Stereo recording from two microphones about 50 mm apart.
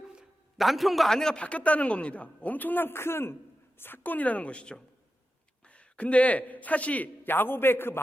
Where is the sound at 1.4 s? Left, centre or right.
Left.